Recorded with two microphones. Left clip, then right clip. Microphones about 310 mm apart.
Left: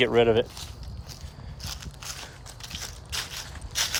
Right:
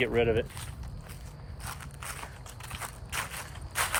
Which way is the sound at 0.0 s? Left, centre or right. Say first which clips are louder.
Left 6 dB; centre.